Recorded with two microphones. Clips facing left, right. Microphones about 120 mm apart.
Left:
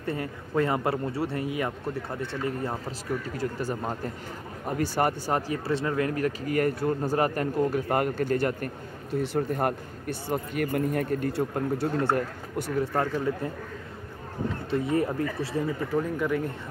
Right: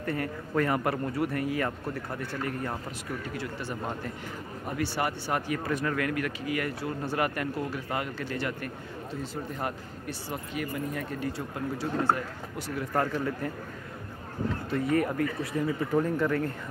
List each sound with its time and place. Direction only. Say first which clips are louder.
0.0 s speech: even; 20° left (ahead or behind)
3.3 s speech: left 5 dB; 45° left (ahead or behind)
9.1 s speech: left 10 dB; 65° left (ahead or behind)
12.8 s speech: right 2 dB; 20° left (ahead or behind)
14.7 s speech: left 1 dB; 25° left (ahead or behind)
16.0 s speech: right 1 dB; 10° left (ahead or behind)